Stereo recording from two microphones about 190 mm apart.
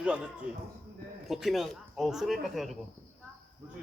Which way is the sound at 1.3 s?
Centre (ahead or behind).